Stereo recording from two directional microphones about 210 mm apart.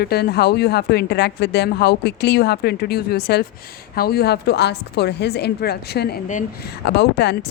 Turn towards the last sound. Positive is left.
turn(degrees=50)  # may be behind; listen again after turning